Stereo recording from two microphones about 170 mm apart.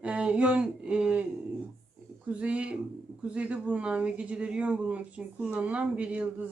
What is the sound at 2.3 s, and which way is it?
Speech, 10° right (ahead or behind).